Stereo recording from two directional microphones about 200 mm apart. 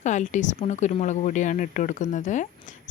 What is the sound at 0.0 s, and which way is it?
Speech, 35° left (ahead or behind).